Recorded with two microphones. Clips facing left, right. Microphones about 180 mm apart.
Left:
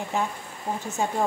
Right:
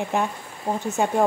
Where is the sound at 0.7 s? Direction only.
75° right (ahead or behind).